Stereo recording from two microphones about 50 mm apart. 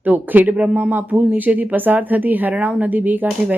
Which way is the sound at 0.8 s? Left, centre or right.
Right.